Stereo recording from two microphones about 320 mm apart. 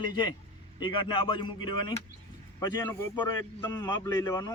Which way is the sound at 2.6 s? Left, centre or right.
Centre.